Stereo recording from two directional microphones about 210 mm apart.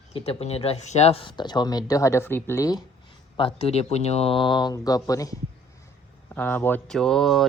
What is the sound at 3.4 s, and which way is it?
Speech, 25° left (ahead or behind).